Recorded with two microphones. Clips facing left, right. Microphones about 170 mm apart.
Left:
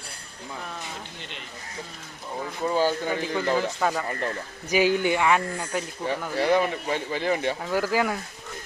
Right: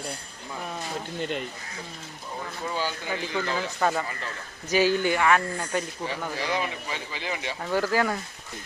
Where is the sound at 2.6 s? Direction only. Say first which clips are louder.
Left 7 dB; 40° left (ahead or behind).